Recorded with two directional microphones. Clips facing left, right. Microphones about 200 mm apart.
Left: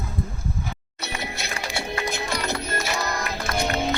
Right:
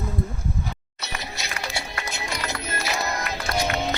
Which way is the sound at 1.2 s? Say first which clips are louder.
Left 2 dB; 55° left (ahead or behind).